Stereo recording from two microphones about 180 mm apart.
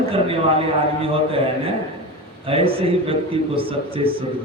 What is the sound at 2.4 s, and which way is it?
A man's voice, 30° right (ahead or behind).